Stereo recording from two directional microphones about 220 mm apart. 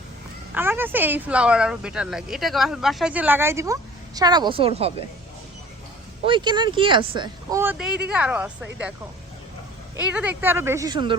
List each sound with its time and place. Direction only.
0.5 s speech: 10° right (ahead or behind); by 5.0 s 25° right (ahead or behind)
6.2 s speech: 20° right (ahead or behind)
7.6 s speech: 5° right (ahead or behind)
9.9 s speech: 5° right (ahead or behind); by 11.2 s 20° right (ahead or behind)